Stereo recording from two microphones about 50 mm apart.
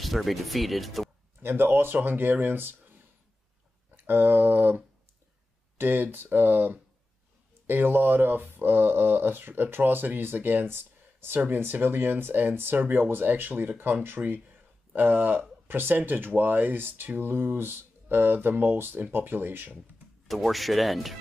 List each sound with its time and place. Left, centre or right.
0.0 s speech: centre
1.4 s speech: right
3.9 s speech: right
20.2 s speech: centre